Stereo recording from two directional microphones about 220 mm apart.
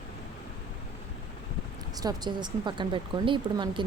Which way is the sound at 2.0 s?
20° right (ahead or behind).